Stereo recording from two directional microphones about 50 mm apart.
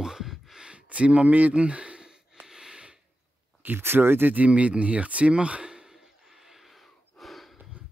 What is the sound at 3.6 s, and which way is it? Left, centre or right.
Speech, right.